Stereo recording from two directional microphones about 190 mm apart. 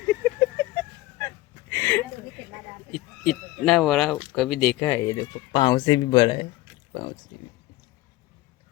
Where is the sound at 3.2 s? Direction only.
Centre (ahead or behind).